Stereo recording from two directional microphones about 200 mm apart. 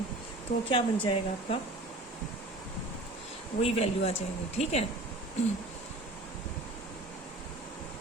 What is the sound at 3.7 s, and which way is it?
Speech, 30° left (ahead or behind).